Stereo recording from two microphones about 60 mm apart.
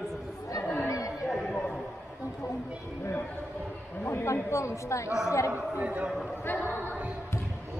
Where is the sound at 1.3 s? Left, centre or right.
Centre.